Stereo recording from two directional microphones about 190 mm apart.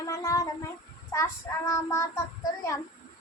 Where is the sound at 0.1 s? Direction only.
15° left (ahead or behind).